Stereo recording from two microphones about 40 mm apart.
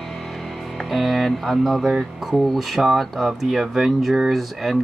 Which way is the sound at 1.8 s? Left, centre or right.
Centre.